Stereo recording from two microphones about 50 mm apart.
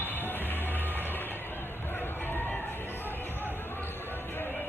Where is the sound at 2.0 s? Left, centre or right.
Left.